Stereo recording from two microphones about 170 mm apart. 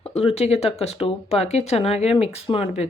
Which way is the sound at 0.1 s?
35° left (ahead or behind).